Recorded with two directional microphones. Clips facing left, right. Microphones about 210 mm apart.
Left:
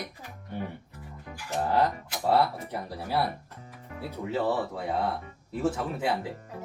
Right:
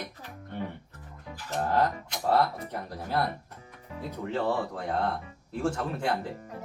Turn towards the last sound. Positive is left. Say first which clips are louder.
# left 1 dB
turn(degrees=5)  # may be behind; listen again after turning